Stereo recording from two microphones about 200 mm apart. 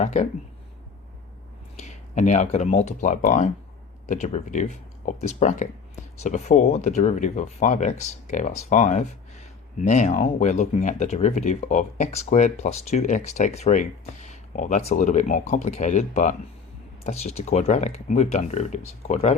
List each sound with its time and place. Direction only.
0.0 s speech: 35° left (ahead or behind)
1.8 s speech: 35° left (ahead or behind)